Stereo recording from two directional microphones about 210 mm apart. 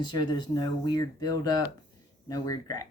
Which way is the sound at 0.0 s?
20° left (ahead or behind).